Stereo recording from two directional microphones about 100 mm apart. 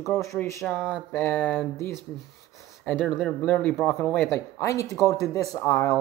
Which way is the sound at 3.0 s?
15° left (ahead or behind).